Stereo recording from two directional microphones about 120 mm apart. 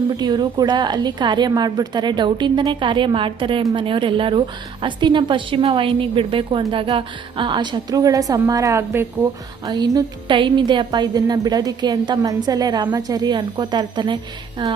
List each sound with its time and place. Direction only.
0.1 s a woman's voice: 40° right (ahead or behind); by 9.0 s 20° right (ahead or behind)
9.6 s a woman's voice: 30° right (ahead or behind)